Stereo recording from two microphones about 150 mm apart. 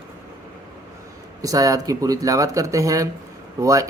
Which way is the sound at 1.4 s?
25° right (ahead or behind).